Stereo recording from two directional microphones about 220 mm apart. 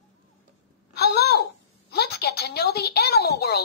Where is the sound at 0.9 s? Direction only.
45° left (ahead or behind).